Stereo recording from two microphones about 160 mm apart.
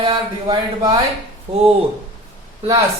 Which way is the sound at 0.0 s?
25° right (ahead or behind).